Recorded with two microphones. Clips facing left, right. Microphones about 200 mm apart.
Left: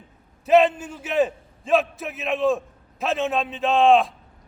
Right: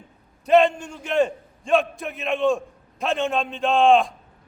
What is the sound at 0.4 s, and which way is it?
A man's voice, 5° left (ahead or behind).